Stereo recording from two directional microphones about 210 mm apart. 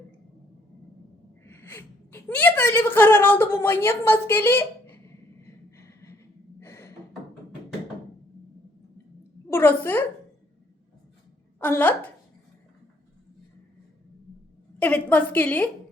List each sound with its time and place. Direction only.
1.5 s gasp: 10° left (ahead or behind)
6.6 s a sound: 10° left (ahead or behind)
9.5 s a woman's voice: 10° left (ahead or behind)
11.6 s a woman's voice: 10° left (ahead or behind)
14.8 s a woman's voice: 10° left (ahead or behind)